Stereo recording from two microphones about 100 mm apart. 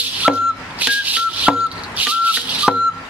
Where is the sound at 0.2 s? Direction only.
10° right (ahead or behind).